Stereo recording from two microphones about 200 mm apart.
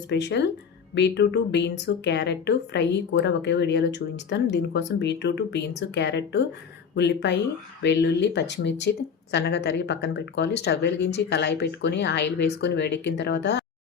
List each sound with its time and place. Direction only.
0.1 s speech: 60° left (ahead or behind)